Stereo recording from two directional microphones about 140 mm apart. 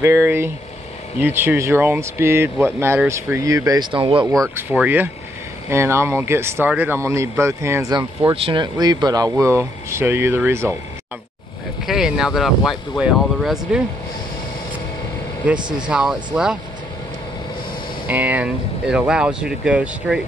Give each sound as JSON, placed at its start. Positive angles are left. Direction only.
{"t": 0.0, "sound": "speech", "side_deg": -15}
{"t": 4.3, "sound": "speech", "side_deg": -25}
{"t": 4.6, "sound": "speech", "side_deg": -10}
{"t": 7.9, "sound": "speech", "side_deg": -30}
{"t": 11.8, "sound": "speech", "side_deg": -5}
{"t": 15.9, "sound": "speech", "side_deg": -5}
{"t": 18.0, "sound": "speech", "side_deg": -10}